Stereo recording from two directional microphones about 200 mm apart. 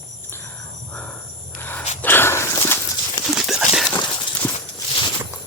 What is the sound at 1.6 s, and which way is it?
Snort, 10° left (ahead or behind).